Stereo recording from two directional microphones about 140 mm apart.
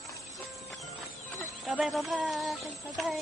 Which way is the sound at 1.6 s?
Centre (ahead or behind).